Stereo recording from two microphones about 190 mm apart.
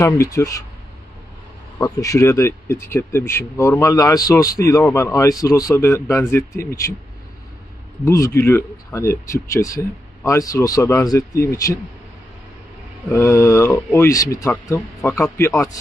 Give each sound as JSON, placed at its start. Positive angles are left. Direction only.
{"t": 0.0, "sound": "speech", "side_deg": 15}
{"t": 1.8, "sound": "speech", "side_deg": 15}
{"t": 8.0, "sound": "speech", "side_deg": 15}
{"t": 13.1, "sound": "speech", "side_deg": 15}